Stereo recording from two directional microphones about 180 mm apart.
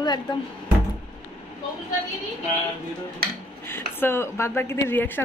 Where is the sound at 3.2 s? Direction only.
60° right (ahead or behind).